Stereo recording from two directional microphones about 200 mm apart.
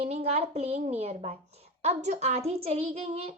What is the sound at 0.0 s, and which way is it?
Speech, 30° right (ahead or behind).